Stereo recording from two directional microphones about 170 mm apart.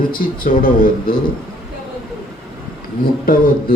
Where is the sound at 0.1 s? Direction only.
60° left (ahead or behind).